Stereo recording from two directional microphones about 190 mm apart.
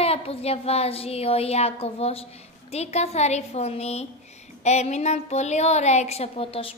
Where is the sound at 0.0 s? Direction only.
30° left (ahead or behind).